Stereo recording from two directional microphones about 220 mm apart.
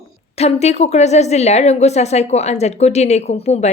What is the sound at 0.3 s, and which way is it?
A woman's voice, 30° left (ahead or behind).